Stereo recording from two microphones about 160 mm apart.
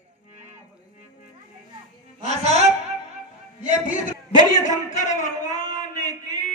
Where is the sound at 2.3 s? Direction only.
45° right (ahead or behind).